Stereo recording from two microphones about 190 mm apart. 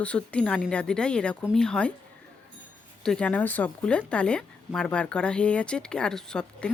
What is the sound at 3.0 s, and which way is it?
Speech, 5° left (ahead or behind).